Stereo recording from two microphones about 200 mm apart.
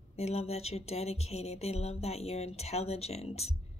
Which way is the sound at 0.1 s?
30° left (ahead or behind).